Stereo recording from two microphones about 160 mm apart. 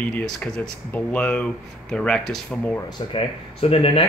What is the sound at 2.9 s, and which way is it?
Speech, 35° left (ahead or behind).